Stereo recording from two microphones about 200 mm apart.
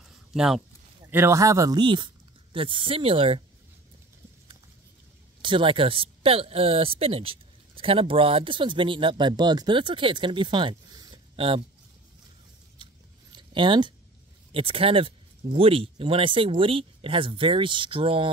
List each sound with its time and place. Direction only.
0.3 s speech: centre (ahead or behind)
1.1 s speech: 15° right (ahead or behind)
5.4 s speech: 25° right (ahead or behind)
12.7 s a sound: 25° right (ahead or behind)
14.5 s speech: 30° right (ahead or behind)